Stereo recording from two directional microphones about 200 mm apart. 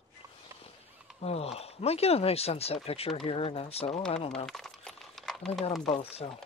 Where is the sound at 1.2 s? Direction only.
30° left (ahead or behind).